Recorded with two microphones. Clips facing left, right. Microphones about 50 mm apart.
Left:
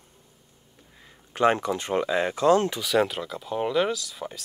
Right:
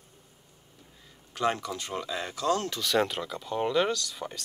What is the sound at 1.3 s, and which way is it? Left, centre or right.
Speech, left.